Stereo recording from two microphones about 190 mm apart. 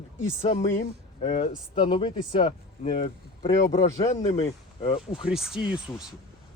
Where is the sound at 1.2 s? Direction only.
30° left (ahead or behind).